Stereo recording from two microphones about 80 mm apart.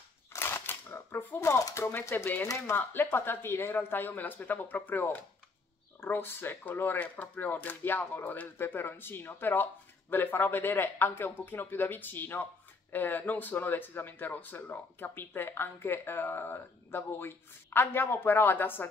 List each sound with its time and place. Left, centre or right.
0.3 s a sound: left
1.6 s speech: left
1.9 s speech: left
2.4 s speech: left